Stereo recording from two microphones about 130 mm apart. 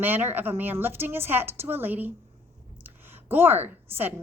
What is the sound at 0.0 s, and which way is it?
A woman's voice, 15° right (ahead or behind).